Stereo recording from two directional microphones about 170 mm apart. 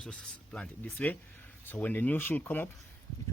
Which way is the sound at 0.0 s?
5° left (ahead or behind).